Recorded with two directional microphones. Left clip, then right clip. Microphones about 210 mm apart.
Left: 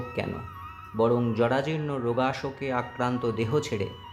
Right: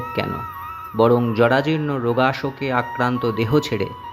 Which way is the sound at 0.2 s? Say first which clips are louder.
Right 8 dB; 20° right (ahead or behind).